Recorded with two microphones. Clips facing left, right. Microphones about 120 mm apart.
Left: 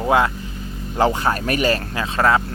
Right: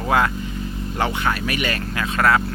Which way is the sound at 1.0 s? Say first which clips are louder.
Left 4 dB; 30° left (ahead or behind).